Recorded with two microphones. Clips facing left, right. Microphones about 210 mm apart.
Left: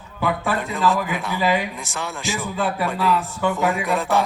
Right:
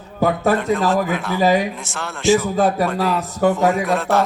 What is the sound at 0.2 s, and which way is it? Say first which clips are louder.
A man's voice: right 6 dB; 40° right (ahead or behind).